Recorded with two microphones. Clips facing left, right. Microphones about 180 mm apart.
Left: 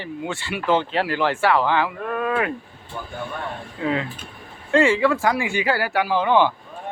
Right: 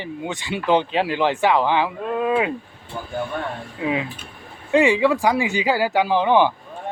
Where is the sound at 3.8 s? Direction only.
10° right (ahead or behind).